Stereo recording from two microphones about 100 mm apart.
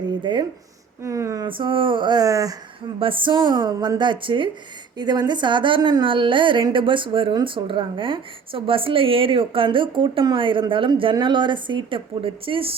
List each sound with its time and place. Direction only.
0.2 s speech: 50° right (ahead or behind)
1.0 s a sound: 35° right (ahead or behind)
1.5 s speech: 60° right (ahead or behind); by 2.6 s 35° right (ahead or behind)
3.0 s a woman's voice: 60° right (ahead or behind)